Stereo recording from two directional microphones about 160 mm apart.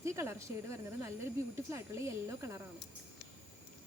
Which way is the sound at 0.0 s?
15° right (ahead or behind).